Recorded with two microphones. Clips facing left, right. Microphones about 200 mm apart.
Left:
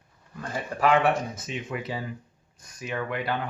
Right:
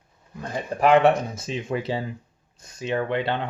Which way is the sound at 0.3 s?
20° right (ahead or behind).